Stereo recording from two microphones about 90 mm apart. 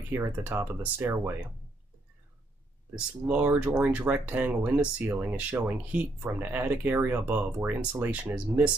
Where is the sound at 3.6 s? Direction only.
15° right (ahead or behind).